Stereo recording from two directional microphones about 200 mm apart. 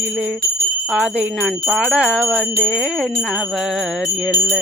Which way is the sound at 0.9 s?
5° right (ahead or behind).